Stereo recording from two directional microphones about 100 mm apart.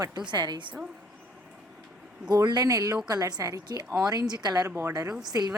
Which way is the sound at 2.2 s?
45° right (ahead or behind).